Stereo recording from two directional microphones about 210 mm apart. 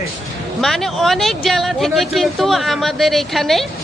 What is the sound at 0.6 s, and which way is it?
Speech, centre (ahead or behind).